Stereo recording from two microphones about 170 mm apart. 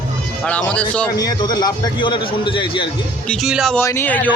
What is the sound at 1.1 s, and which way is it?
A man's voice, 20° left (ahead or behind).